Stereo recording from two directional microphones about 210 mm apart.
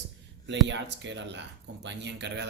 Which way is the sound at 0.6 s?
55° right (ahead or behind).